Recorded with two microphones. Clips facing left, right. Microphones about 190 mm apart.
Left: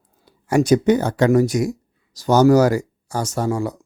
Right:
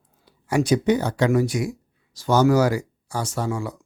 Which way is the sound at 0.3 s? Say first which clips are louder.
Left 5 dB; 45° left (ahead or behind).